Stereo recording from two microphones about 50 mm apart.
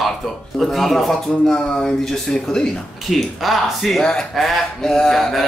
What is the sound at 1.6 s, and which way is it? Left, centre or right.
Speech, centre.